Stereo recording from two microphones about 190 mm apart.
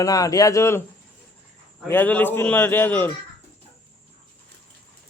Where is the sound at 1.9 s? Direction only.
10° left (ahead or behind).